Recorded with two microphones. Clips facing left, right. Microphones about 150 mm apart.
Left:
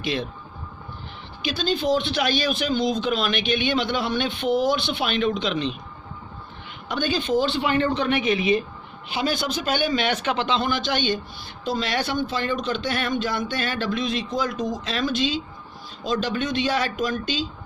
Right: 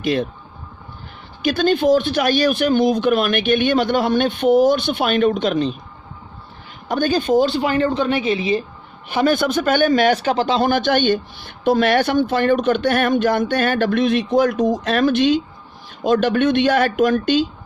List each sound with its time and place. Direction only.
0.0 s speech: 45° right (ahead or behind)
1.4 s speech: 55° right (ahead or behind)
6.8 s speech: 45° right (ahead or behind)
9.0 s speech: 50° right (ahead or behind)